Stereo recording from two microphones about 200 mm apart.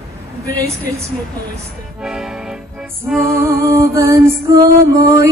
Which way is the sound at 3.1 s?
10° right (ahead or behind).